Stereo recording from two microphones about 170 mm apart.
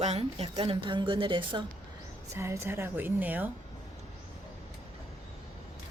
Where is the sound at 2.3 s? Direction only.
15° right (ahead or behind).